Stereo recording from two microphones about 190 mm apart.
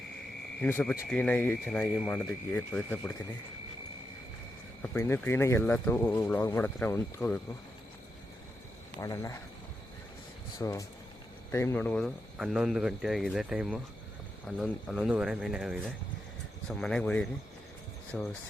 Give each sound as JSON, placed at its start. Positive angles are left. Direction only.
{"t": 0.6, "sound": "speech", "side_deg": 10}
{"t": 4.8, "sound": "speech", "side_deg": 10}
{"t": 9.0, "sound": "speech", "side_deg": 20}
{"t": 10.6, "sound": "speech", "side_deg": 15}